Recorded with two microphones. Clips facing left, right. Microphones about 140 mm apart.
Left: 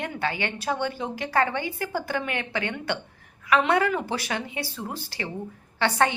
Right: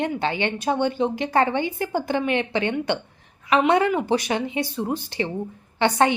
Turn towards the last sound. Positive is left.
turn(degrees=-20)  # may be behind; listen again after turning